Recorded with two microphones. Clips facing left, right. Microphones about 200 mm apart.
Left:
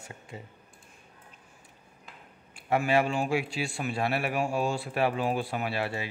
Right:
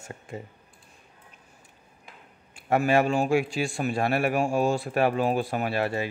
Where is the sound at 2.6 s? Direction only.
50° right (ahead or behind).